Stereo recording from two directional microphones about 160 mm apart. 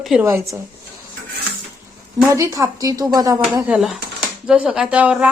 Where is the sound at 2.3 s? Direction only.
20° right (ahead or behind).